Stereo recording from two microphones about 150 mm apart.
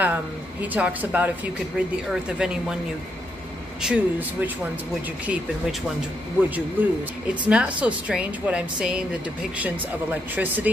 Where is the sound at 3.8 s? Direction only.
10° right (ahead or behind).